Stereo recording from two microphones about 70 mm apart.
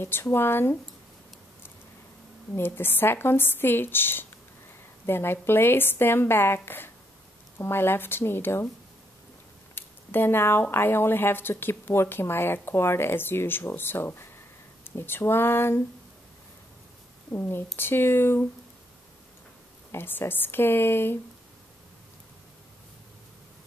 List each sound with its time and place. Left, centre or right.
0.0 s speech: left
2.5 s speech: left
9.8 s a sound: left
10.7 s speech: left
17.3 s speech: left
19.9 s speech: left